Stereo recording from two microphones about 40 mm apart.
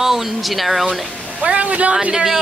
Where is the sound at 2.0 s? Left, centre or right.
Right.